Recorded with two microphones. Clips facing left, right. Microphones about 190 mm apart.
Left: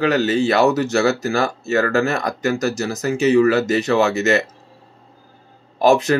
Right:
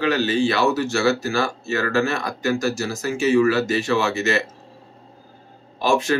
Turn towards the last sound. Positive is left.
turn(degrees=40)  # may be behind; listen again after turning